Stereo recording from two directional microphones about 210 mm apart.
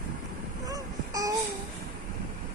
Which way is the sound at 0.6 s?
15° right (ahead or behind).